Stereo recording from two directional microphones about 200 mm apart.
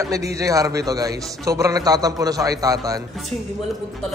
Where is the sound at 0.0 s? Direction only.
15° right (ahead or behind).